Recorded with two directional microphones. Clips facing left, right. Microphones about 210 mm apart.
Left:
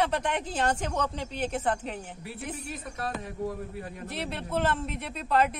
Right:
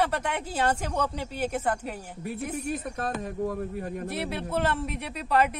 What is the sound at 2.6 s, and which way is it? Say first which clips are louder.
Speech: right 5 dB; 45° right (ahead or behind).